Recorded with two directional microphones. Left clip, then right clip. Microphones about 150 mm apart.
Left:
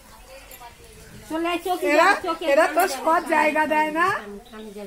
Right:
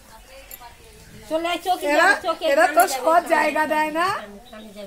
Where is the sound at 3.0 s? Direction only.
35° right (ahead or behind).